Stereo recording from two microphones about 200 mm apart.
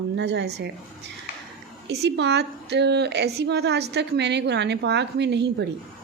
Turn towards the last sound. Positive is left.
turn(degrees=-60)  # may be behind; listen again after turning